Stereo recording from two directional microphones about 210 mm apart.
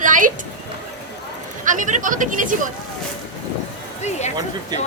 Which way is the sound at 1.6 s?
35° right (ahead or behind).